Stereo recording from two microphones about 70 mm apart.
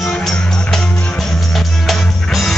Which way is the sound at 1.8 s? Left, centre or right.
Centre.